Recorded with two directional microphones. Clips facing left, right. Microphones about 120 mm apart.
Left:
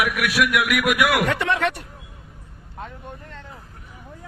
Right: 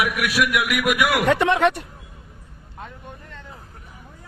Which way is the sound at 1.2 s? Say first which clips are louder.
Right 4 dB; 25° right (ahead or behind).